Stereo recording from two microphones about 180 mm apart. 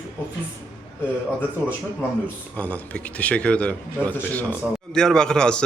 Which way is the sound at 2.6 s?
10° left (ahead or behind).